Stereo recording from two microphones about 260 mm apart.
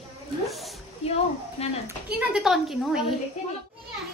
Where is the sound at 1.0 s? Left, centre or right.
Left.